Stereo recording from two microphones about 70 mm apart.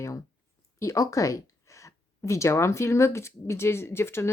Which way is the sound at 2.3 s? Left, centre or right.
Left.